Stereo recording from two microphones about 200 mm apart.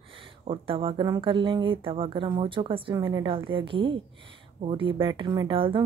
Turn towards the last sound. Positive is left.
turn(degrees=-25)  # may be behind; listen again after turning